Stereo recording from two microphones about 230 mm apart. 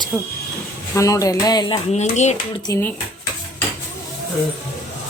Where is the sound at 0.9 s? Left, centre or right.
Centre.